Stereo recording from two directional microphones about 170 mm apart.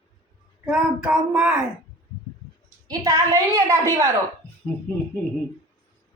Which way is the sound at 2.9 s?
20° right (ahead or behind).